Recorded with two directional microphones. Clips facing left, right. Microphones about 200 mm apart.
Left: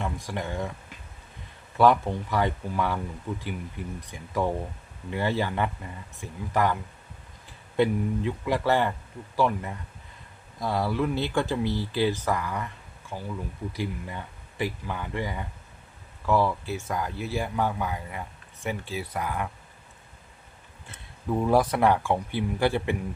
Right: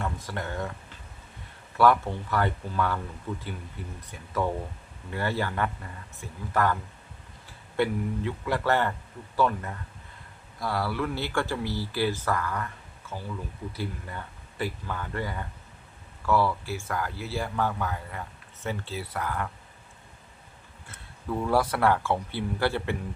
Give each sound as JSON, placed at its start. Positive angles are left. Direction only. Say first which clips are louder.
{"t": 0.0, "sound": "speech", "louder": "left 1 dB", "side_deg": 15}
{"t": 7.8, "sound": "speech", "louder": "left 3 dB", "side_deg": 15}
{"t": 20.8, "sound": "speech", "louder": "left 3 dB", "side_deg": 20}